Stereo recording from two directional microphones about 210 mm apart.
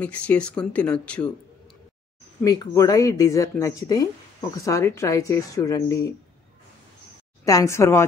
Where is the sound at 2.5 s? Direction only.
15° left (ahead or behind).